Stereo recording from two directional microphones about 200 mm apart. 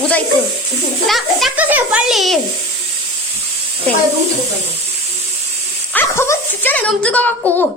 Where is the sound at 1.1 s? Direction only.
Centre (ahead or behind).